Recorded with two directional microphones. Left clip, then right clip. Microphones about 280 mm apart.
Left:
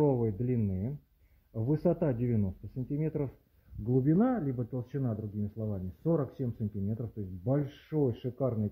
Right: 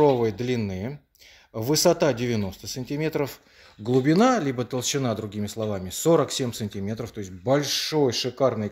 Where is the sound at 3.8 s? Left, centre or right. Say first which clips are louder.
Right 9 dB; right.